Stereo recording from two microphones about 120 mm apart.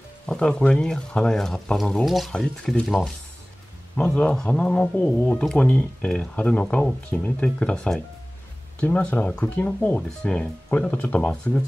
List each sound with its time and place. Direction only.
0.3 s speech: 5° left (ahead or behind)
3.9 s speech: 15° left (ahead or behind)